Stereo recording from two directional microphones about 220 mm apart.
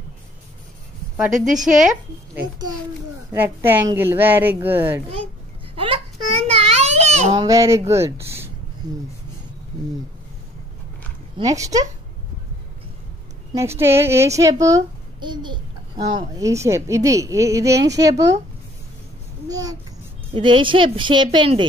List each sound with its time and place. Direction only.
1.3 s a woman's voice: 35° right (ahead or behind)
3.3 s a child's voice: 10° right (ahead or behind)
5.8 s baby cry: 25° right (ahead or behind)
7.3 s a child's voice: 15° right (ahead or behind)
11.3 s a child's voice: 15° right (ahead or behind)
13.5 s a child's voice: 10° right (ahead or behind)
19.5 s a child's voice: 15° right (ahead or behind)